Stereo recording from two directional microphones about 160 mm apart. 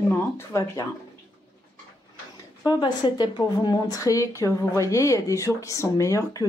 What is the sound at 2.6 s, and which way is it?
A woman's voice, 25° left (ahead or behind).